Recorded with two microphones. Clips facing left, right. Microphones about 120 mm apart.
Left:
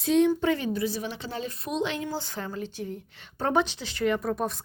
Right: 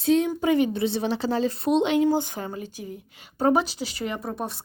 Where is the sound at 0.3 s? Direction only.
15° right (ahead or behind).